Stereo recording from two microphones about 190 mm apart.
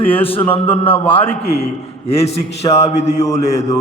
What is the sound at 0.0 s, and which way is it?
A man's voice, 30° left (ahead or behind).